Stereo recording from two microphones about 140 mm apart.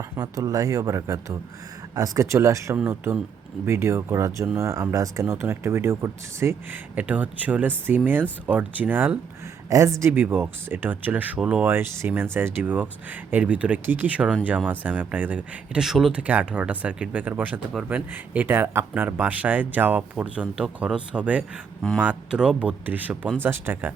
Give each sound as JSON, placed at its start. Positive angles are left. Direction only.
{"t": 0.2, "sound": "speech", "side_deg": -25}